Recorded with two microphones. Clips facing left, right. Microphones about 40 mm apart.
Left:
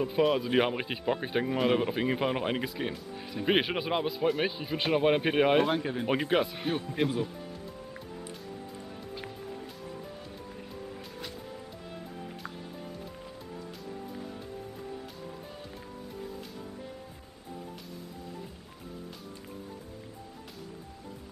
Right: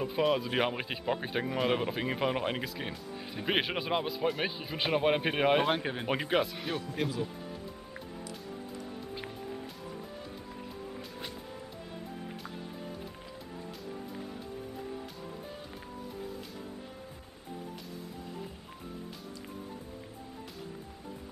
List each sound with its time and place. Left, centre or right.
0.0 s speech: centre
5.7 s speech: right
6.0 s speech: centre